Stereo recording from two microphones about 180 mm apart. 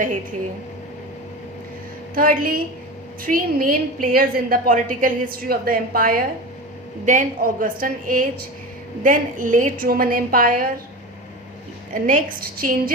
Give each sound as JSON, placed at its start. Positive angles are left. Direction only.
{"t": 2.1, "sound": "a woman's voice", "side_deg": -50}
{"t": 12.0, "sound": "a woman's voice", "side_deg": -50}